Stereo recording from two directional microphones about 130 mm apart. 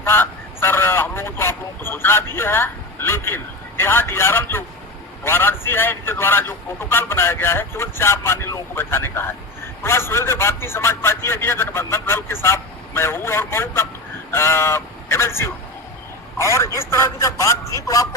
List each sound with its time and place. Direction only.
0.0 s a man's voice: 20° left (ahead or behind)